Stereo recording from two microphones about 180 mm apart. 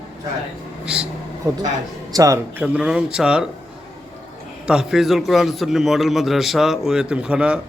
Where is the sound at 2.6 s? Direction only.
5° right (ahead or behind).